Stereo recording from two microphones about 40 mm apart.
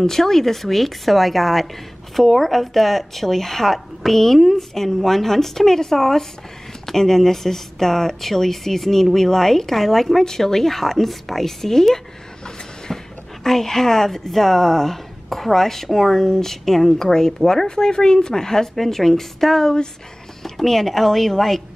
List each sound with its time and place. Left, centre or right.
0.0 s speech: centre